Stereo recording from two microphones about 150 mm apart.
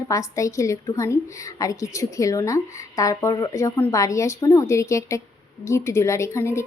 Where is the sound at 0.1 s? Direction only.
20° left (ahead or behind).